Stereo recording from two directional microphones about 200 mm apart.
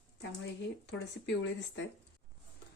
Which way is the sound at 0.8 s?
60° left (ahead or behind).